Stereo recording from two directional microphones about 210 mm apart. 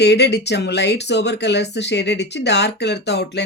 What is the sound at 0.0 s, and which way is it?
Speech, 55° left (ahead or behind).